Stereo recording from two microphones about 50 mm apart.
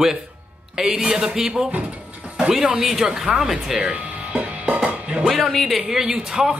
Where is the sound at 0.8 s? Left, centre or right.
Centre.